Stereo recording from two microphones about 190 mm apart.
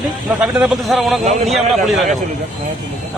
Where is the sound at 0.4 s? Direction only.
5° right (ahead or behind).